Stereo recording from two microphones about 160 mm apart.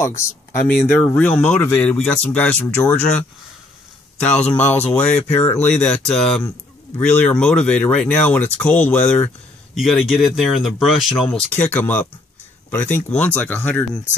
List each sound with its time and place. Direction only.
0.0 s speech: 15° left (ahead or behind)
9.8 s speech: centre (ahead or behind)
11.3 s speech: 10° left (ahead or behind)